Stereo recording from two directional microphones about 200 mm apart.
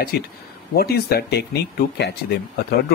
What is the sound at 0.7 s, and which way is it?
Speech, 50° left (ahead or behind).